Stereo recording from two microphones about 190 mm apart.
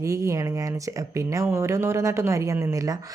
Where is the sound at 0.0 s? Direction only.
15° right (ahead or behind).